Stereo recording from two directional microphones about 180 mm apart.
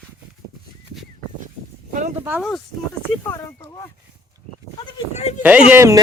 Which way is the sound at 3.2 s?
15° left (ahead or behind).